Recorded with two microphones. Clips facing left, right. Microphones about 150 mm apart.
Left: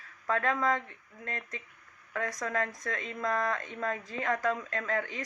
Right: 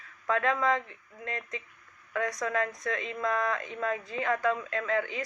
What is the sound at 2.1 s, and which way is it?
A woman's voice, 40° left (ahead or behind).